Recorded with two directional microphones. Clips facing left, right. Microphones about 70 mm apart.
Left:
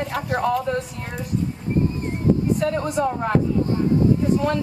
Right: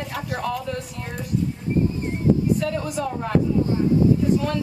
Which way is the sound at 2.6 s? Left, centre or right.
Left.